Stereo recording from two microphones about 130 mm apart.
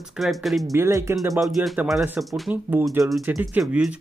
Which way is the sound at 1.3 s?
Centre (ahead or behind).